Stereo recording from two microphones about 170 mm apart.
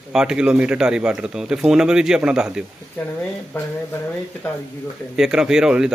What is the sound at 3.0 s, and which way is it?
Speech, 10° left (ahead or behind).